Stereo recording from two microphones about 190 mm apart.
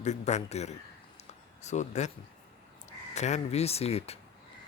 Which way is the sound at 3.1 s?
35° left (ahead or behind).